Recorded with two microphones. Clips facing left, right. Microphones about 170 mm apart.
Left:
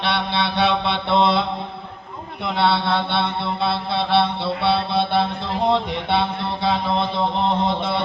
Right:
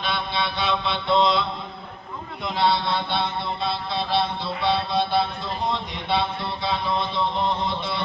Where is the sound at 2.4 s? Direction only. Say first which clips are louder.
Left 3 dB; 65° left (ahead or behind).